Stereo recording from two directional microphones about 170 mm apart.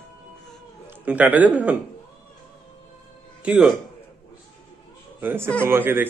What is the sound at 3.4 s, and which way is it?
Speech, 5° right (ahead or behind).